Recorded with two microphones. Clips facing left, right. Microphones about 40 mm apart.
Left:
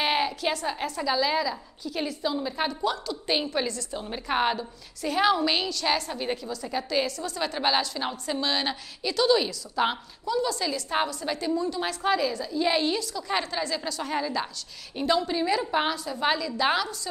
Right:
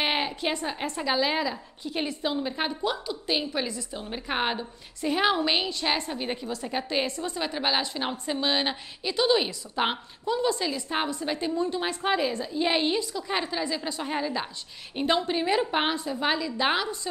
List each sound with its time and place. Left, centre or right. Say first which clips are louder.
0.0 s a sound: left 2 dB; centre
0.8 s a woman's voice: even; right
3.3 s a woman's voice: left 2 dB; centre
3.6 s a woman's voice: left 2 dB; centre; by 7.3 s right
7.5 s a woman's voice: left 2 dB; centre
7.8 s a woman's voice: even; right
10.7 s a woman's voice: left 2 dB; centre
11.1 s a woman's voice: even; right; by 13.8 s centre
13.8 s a woman's voice: even; right
15.0 s a woman's voice: even; right